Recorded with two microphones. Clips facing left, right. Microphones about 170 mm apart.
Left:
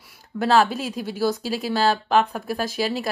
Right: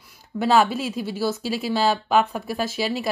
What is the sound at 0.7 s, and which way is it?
Speech, 45° left (ahead or behind).